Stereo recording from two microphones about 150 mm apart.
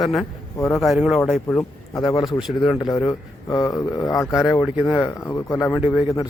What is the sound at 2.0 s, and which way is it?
A man's voice, 25° left (ahead or behind).